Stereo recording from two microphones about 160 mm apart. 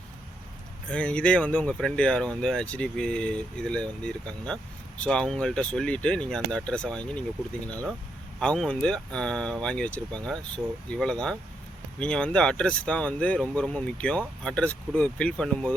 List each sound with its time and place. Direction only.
0.9 s speech: 5° left (ahead or behind)